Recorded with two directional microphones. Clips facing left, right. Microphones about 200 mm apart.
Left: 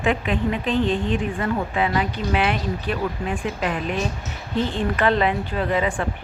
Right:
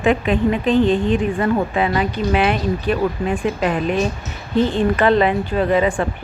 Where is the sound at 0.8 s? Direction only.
15° right (ahead or behind).